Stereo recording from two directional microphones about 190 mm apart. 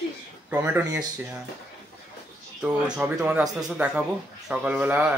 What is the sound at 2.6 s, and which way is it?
Speech, 5° right (ahead or behind).